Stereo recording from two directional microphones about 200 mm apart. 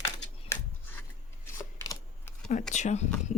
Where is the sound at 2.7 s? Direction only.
35° left (ahead or behind).